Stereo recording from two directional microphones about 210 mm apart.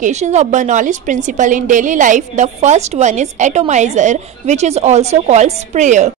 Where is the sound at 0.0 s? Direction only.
35° right (ahead or behind).